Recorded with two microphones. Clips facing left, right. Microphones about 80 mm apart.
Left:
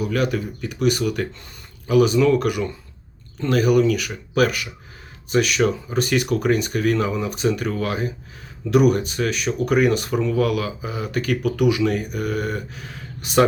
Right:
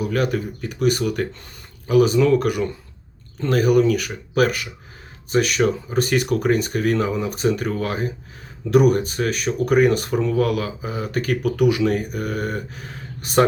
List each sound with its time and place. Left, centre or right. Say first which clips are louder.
0.0 s speech: even; right